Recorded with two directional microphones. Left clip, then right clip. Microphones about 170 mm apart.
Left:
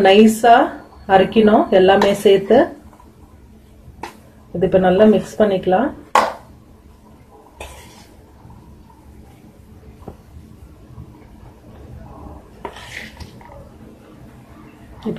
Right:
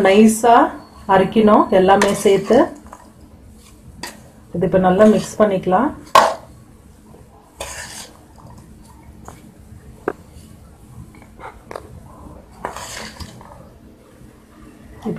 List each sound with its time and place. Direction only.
0.0 s speech: 20° right (ahead or behind)
4.6 s speech: 20° right (ahead or behind)